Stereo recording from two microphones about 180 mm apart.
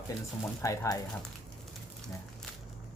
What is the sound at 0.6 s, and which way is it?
Speech, 15° left (ahead or behind).